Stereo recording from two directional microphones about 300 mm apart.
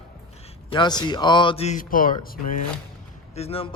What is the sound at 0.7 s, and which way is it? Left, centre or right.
Speech, centre.